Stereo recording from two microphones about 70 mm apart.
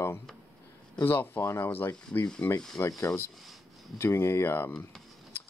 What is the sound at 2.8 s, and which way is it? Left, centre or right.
Speech, left.